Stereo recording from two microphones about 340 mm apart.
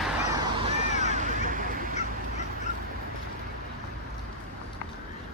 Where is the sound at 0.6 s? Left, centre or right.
Centre.